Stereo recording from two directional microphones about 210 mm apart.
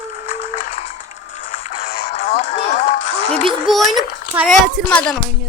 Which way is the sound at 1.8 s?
40° left (ahead or behind).